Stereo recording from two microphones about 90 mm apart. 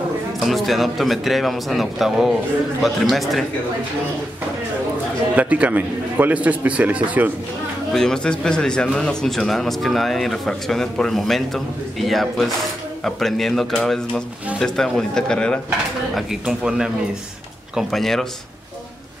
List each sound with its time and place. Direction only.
0.5 s speech: centre (ahead or behind)
5.3 s a man's voice: 15° right (ahead or behind)
7.9 s speech: 5° left (ahead or behind)
16.2 s a man's voice: 5° right (ahead or behind)
17.7 s speech: 5° left (ahead or behind)